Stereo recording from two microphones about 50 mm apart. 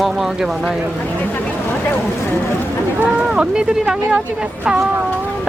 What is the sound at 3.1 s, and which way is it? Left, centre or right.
Speech, centre.